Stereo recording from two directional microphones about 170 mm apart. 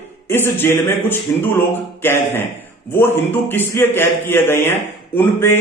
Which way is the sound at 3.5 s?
10° left (ahead or behind).